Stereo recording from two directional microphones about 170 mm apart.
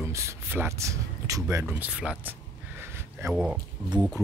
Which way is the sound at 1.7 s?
10° right (ahead or behind).